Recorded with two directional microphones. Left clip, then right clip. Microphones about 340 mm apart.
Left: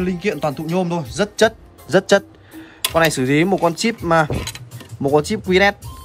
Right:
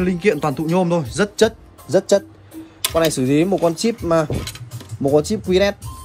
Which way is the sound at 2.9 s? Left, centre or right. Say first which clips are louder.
Left 1 dB; left.